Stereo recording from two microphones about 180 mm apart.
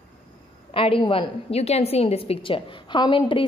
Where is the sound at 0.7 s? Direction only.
30° left (ahead or behind).